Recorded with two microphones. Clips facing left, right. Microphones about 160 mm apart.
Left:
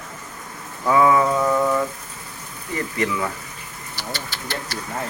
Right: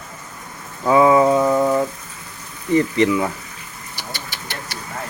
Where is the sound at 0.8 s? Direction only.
20° right (ahead or behind).